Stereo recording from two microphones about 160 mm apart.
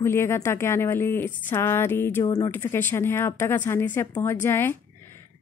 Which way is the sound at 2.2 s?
25° left (ahead or behind).